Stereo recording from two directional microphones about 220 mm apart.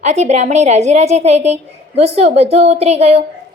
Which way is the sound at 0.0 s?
30° right (ahead or behind).